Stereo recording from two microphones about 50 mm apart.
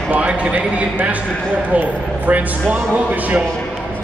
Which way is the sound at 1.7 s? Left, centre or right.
Right.